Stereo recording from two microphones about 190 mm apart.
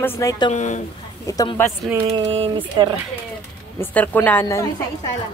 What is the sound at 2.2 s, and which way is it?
Speech, 30° right (ahead or behind).